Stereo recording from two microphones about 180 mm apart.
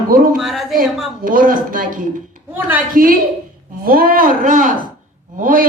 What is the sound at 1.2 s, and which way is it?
A man's voice, 50° right (ahead or behind).